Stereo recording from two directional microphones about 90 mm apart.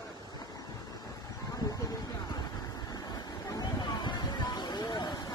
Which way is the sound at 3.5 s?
50° left (ahead or behind).